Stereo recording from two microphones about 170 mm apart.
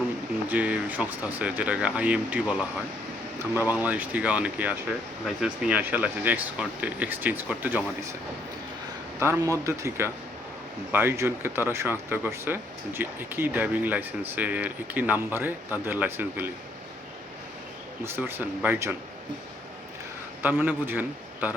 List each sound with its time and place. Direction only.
0.4 s speech: 10° right (ahead or behind)
9.1 s speech: 15° right (ahead or behind)
18.0 s speech: 15° right (ahead or behind)
20.4 s a man's voice: 10° right (ahead or behind)